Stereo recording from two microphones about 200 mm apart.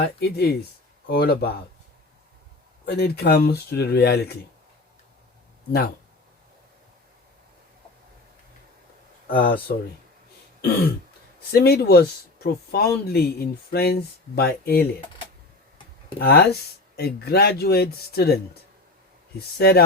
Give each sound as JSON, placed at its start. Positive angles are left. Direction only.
{"t": 0.0, "sound": "speech", "side_deg": 50}
{"t": 2.8, "sound": "speech", "side_deg": 55}
{"t": 9.2, "sound": "speech", "side_deg": 45}
{"t": 11.5, "sound": "speech", "side_deg": 50}
{"t": 16.1, "sound": "speech", "side_deg": 50}
{"t": 19.5, "sound": "speech", "side_deg": 55}